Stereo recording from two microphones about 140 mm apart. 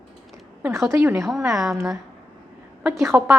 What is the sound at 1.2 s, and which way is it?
Speech, centre (ahead or behind).